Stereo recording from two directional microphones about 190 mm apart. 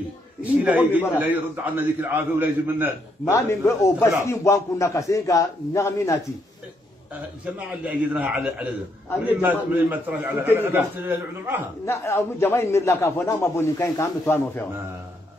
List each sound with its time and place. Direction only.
0.4 s a man's voice: 10° right (ahead or behind)
3.3 s a man's voice: 15° left (ahead or behind)
7.5 s a man's voice: 5° right (ahead or behind)
11.8 s a man's voice: 15° left (ahead or behind)